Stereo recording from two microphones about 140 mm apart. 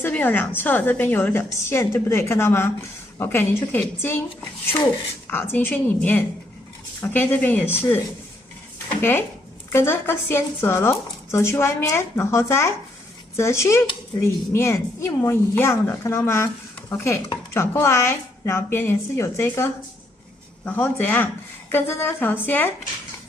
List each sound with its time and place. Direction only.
0.0 s speech: 15° left (ahead or behind)
5.3 s speech: 15° left (ahead or behind)
9.7 s speech: 15° left (ahead or behind)